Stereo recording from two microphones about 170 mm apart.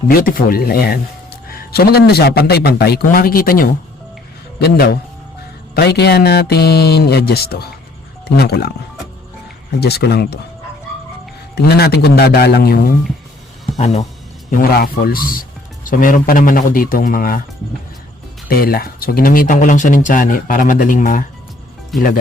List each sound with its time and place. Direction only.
0.1 s speech: 55° left (ahead or behind)
4.6 s speech: 70° left (ahead or behind)
9.8 s speech: 70° left (ahead or behind)
11.5 s speech: 70° left (ahead or behind)
13.7 s speech: 40° left (ahead or behind)
14.5 s speech: 60° left (ahead or behind)
18.4 s speech: 60° left (ahead or behind)
21.9 s speech: centre (ahead or behind)